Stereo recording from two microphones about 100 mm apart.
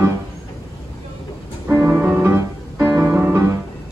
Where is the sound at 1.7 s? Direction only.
25° right (ahead or behind).